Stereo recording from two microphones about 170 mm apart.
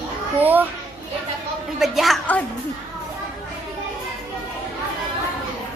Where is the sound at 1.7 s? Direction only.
Centre (ahead or behind).